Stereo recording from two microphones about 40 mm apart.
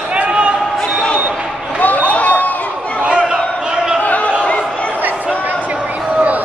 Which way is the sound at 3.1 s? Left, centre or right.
Right.